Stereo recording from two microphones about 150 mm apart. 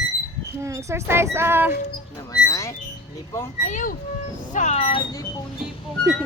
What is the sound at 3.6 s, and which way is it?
Speech, 60° left (ahead or behind).